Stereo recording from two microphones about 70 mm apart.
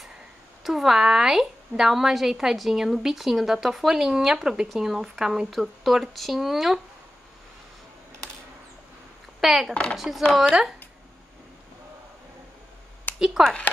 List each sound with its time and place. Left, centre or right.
0.7 s a woman's voice: centre
9.4 s a woman's voice: centre
13.1 s a sound: left
13.4 s speech: centre